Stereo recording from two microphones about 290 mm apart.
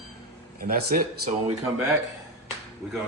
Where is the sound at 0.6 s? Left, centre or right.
Right.